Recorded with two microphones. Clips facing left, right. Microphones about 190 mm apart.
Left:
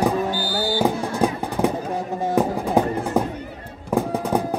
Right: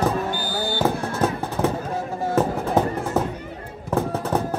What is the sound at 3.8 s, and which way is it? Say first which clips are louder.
Fireworks: left 2 dB; 15° left (ahead or behind).